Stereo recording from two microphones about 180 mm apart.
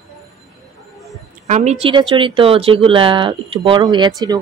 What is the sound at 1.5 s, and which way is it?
Speech, 40° right (ahead or behind).